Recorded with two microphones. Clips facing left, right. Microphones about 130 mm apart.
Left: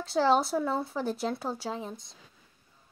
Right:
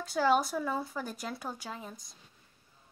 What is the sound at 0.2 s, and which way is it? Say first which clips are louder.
Speech: left 3 dB; 15° left (ahead or behind).